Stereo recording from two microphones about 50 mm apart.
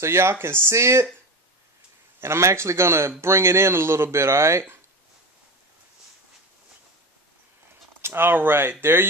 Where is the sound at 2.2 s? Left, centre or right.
Right.